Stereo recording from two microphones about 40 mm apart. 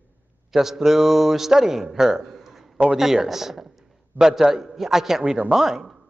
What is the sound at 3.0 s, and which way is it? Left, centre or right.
A man's voice, centre.